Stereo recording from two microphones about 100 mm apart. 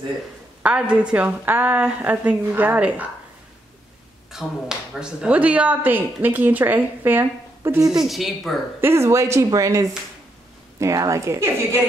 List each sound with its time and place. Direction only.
0.6 s speech: 15° right (ahead or behind)
4.3 s speech: 5° right (ahead or behind)
8.0 s speech: centre (ahead or behind)
8.8 s a woman's voice: 25° right (ahead or behind)